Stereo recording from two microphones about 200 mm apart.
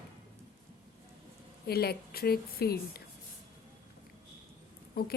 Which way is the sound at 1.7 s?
50° left (ahead or behind).